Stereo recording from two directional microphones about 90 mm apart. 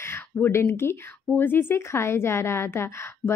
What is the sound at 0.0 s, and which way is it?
A woman's voice, 30° left (ahead or behind).